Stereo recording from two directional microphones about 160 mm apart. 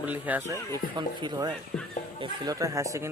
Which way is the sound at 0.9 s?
25° right (ahead or behind).